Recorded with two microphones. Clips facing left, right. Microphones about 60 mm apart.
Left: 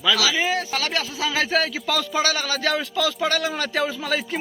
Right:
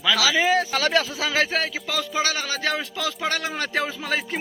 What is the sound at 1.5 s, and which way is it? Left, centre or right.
A man's voice, centre.